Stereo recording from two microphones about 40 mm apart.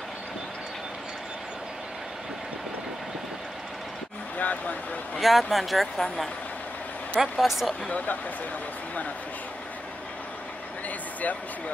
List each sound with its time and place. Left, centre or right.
4.4 s vehicle: left
5.2 s speech: centre
7.2 s speech: centre
7.9 s speech: left